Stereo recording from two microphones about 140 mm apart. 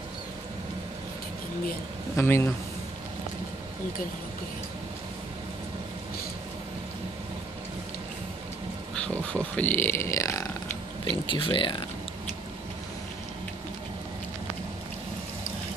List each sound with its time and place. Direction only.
2.1 s speech: 20° left (ahead or behind)
9.0 s a sound: 10° left (ahead or behind)
11.2 s speech: 35° left (ahead or behind)